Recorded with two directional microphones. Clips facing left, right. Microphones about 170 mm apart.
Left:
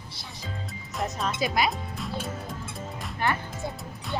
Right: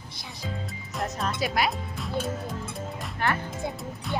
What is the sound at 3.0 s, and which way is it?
Music, centre (ahead or behind).